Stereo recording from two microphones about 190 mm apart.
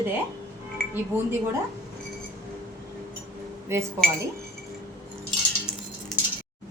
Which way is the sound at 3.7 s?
15° right (ahead or behind).